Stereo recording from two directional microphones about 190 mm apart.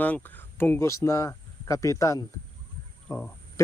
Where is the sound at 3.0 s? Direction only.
10° left (ahead or behind).